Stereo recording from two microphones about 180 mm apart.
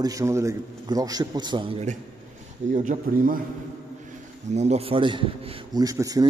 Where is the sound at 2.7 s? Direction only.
45° right (ahead or behind).